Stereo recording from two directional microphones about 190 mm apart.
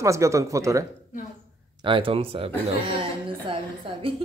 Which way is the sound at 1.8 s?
25° right (ahead or behind).